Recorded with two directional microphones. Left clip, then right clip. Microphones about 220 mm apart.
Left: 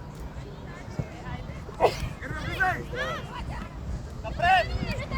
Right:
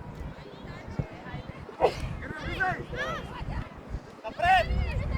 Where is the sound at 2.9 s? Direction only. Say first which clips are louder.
Left 2 dB; centre (ahead or behind).